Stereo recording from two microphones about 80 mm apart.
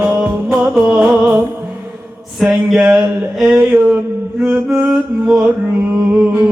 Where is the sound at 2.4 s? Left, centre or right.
Centre.